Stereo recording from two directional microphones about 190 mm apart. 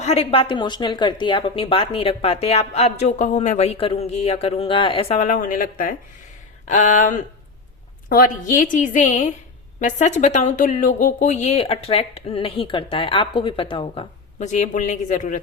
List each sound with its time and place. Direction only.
0.0 s a woman's voice: 30° left (ahead or behind)